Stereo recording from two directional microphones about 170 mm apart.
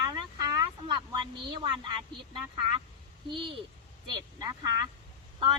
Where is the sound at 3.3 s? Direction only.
30° right (ahead or behind).